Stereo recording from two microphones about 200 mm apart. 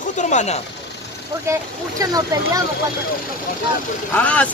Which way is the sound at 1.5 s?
15° right (ahead or behind).